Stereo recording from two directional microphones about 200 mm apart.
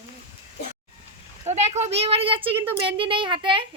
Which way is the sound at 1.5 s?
35° right (ahead or behind).